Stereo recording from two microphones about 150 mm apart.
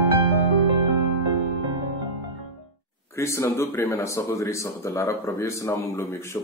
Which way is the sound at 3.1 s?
20° left (ahead or behind).